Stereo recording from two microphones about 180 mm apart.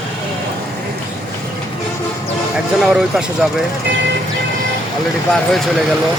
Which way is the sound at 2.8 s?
5° right (ahead or behind).